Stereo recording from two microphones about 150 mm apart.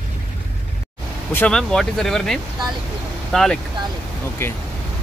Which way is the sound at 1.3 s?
5° left (ahead or behind).